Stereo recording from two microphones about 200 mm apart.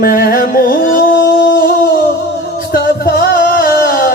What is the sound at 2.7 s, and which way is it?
Music, 45° left (ahead or behind).